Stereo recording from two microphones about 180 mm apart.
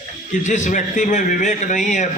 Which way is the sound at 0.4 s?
40° left (ahead or behind).